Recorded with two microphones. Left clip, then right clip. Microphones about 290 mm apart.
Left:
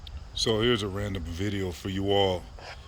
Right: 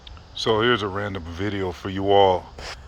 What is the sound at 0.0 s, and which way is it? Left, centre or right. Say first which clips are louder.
Speech: right 3 dB; centre.